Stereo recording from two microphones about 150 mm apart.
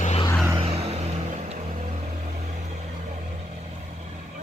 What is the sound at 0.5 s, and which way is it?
Vehicle, 40° right (ahead or behind).